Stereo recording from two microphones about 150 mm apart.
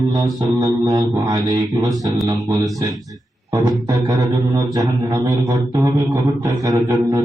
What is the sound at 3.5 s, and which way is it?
Music, 25° right (ahead or behind).